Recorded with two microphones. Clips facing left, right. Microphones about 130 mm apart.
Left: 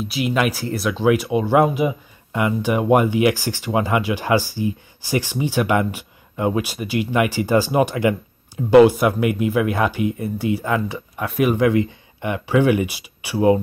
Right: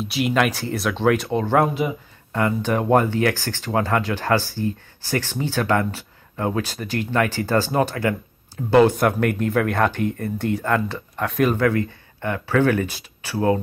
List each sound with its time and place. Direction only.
0.0 s speech: centre (ahead or behind)